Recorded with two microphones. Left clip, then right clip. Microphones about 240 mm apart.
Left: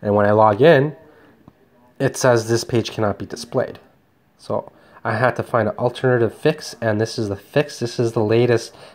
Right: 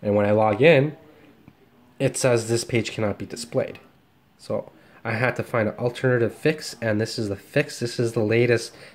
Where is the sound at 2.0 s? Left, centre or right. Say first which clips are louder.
Left 5 dB; centre.